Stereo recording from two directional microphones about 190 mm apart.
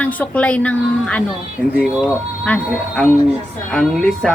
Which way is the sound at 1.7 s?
5° right (ahead or behind).